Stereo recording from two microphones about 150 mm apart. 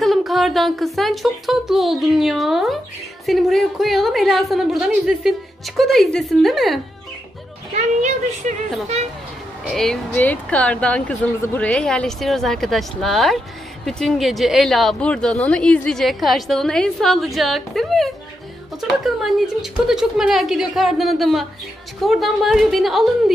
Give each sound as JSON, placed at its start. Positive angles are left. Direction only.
{"t": 0.0, "sound": "a woman's voice", "side_deg": 0}
{"t": 7.7, "sound": "a woman's voice", "side_deg": -50}
{"t": 9.7, "sound": "a woman's voice", "side_deg": 5}